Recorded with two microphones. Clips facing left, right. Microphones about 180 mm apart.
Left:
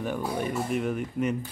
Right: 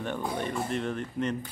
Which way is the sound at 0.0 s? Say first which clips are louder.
Left 2 dB; 5° left (ahead or behind).